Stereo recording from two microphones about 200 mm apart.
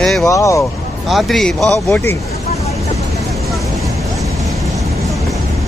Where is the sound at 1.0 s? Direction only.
Centre (ahead or behind).